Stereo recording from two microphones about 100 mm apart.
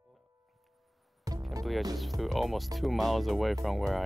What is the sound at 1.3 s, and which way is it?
Music, 35° right (ahead or behind).